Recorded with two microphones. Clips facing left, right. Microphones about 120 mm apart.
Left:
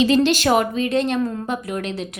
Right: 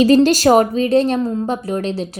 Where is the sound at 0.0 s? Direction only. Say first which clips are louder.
Right 5 dB; 40° right (ahead or behind).